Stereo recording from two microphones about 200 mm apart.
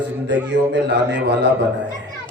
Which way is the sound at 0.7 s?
60° right (ahead or behind).